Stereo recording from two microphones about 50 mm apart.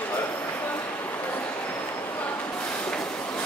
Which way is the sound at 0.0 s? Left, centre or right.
Left.